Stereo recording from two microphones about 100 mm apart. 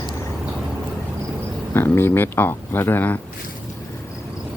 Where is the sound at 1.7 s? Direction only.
25° left (ahead or behind).